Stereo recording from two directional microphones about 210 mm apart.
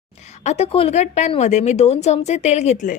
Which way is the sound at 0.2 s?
30° left (ahead or behind).